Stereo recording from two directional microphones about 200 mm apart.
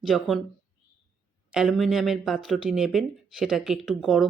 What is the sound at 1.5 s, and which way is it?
Speech, centre (ahead or behind).